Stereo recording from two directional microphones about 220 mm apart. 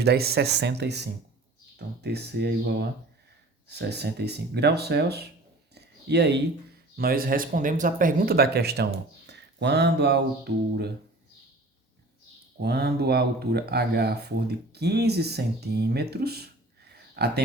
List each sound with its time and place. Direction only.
0.0 s speech: 45° right (ahead or behind)
5.7 s a sound: 50° right (ahead or behind)
6.9 s speech: 40° right (ahead or behind)
12.5 s speech: 50° right (ahead or behind)